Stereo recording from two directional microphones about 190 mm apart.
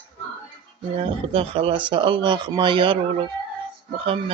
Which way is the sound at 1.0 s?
30° right (ahead or behind).